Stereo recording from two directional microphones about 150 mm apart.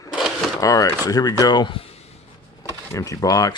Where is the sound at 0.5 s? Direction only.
20° left (ahead or behind).